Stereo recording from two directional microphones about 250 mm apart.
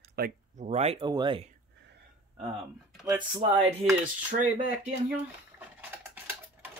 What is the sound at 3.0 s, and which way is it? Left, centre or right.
Speech, centre.